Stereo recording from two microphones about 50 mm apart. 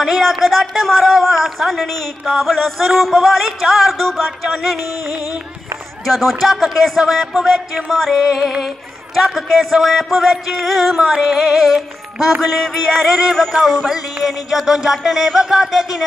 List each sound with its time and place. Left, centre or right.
0.0 s music: centre
2.9 s music: centre
11.0 s music: centre